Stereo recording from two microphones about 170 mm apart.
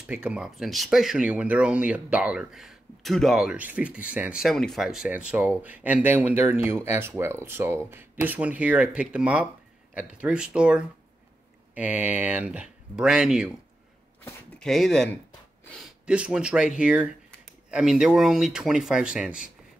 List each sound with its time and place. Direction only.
0.0 s speech: 5° right (ahead or behind)
14.6 s speech: 5° left (ahead or behind)
15.6 s a sound: 5° left (ahead or behind)
16.1 s speech: 5° right (ahead or behind)